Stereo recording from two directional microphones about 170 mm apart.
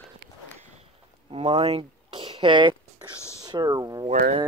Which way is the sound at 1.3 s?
30° right (ahead or behind).